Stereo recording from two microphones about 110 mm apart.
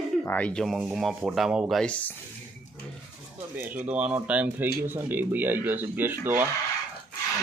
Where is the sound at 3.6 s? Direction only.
15° right (ahead or behind).